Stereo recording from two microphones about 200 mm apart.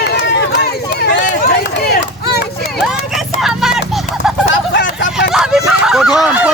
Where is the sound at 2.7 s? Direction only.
Centre (ahead or behind).